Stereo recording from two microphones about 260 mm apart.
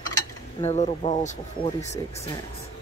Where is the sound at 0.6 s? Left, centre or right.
Left.